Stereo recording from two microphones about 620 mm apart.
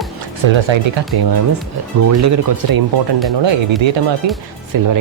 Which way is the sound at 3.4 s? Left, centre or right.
Right.